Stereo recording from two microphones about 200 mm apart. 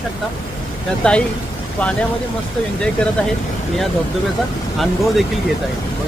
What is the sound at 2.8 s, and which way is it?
Speech, 5° left (ahead or behind).